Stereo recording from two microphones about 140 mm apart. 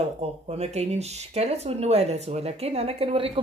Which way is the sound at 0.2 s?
50° right (ahead or behind).